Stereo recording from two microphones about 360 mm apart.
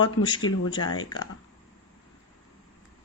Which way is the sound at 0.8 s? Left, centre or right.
Left.